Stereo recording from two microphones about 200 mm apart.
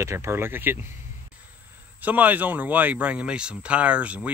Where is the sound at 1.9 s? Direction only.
10° right (ahead or behind).